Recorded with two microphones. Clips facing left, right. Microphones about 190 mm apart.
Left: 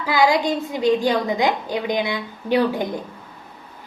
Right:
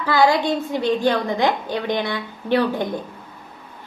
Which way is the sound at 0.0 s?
15° left (ahead or behind).